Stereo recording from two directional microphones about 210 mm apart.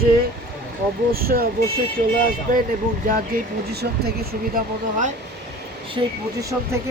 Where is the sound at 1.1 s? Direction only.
45° right (ahead or behind).